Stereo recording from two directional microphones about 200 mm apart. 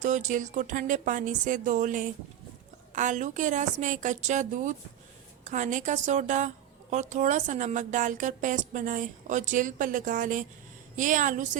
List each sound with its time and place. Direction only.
0.0 s a woman's voice: 35° right (ahead or behind)